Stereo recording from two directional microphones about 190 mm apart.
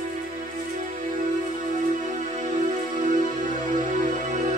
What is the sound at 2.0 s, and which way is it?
Music, 40° right (ahead or behind).